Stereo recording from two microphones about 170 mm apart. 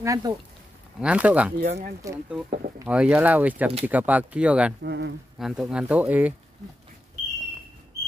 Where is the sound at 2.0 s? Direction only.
20° right (ahead or behind).